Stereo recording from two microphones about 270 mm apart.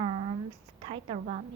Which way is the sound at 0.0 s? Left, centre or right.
Right.